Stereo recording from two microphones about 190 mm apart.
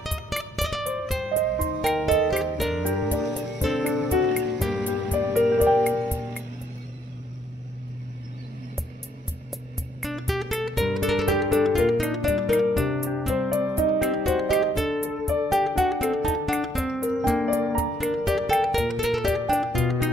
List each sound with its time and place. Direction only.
0.0 s music: centre (ahead or behind)
9.5 s music: centre (ahead or behind)